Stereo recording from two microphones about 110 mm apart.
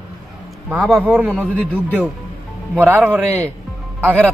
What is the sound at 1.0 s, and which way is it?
Speech, 15° right (ahead or behind).